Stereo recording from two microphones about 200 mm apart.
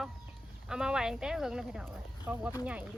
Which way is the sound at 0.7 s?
5° right (ahead or behind).